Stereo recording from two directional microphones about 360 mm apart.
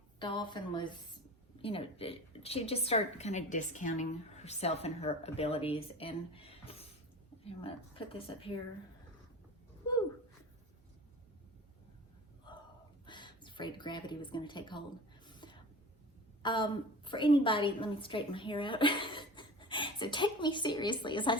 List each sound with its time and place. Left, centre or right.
0.2 s a woman's voice: centre
12.5 s gasp: centre
13.1 s a sound: centre
16.4 s a woman's voice: centre